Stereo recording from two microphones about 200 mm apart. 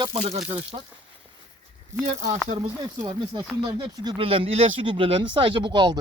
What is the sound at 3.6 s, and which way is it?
Speech, 20° right (ahead or behind).